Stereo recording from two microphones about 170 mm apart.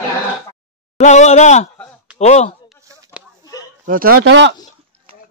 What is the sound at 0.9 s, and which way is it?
Speech, 40° left (ahead or behind).